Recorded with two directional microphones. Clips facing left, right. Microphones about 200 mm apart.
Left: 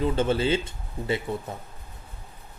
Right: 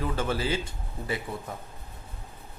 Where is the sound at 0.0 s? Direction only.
25° left (ahead or behind).